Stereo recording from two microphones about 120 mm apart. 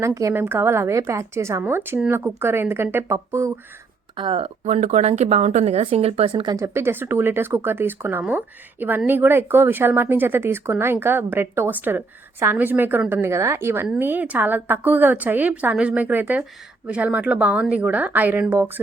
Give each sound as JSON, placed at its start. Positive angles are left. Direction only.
{"t": 0.0, "sound": "a woman's voice", "side_deg": -25}
{"t": 4.2, "sound": "speech", "side_deg": -50}
{"t": 6.5, "sound": "a woman's voice", "side_deg": -25}